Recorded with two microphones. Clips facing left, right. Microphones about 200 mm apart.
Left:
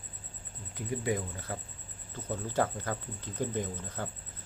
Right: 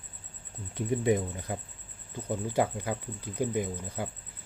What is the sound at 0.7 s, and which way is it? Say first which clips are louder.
Speech: right 6 dB; 25° right (ahead or behind).